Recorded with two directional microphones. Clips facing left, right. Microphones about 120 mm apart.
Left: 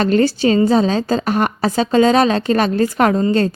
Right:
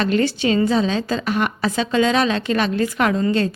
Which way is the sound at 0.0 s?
40° left (ahead or behind).